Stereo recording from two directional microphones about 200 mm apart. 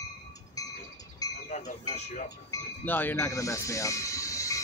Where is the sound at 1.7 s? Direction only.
35° left (ahead or behind).